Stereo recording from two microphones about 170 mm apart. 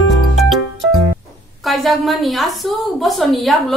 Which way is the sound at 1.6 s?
Centre (ahead or behind).